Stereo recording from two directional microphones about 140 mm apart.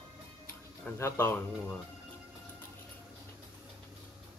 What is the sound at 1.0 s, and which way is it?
Speech, 20° left (ahead or behind).